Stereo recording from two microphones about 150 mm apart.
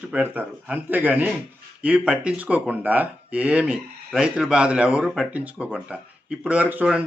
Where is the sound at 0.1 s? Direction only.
10° right (ahead or behind).